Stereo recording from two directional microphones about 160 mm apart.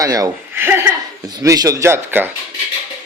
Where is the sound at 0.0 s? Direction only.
20° right (ahead or behind).